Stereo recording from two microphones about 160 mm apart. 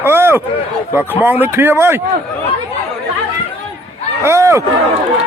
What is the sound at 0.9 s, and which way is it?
Speech, 15° right (ahead or behind).